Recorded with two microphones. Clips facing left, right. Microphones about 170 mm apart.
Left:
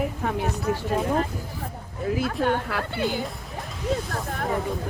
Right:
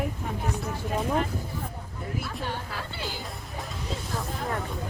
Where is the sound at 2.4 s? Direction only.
60° left (ahead or behind).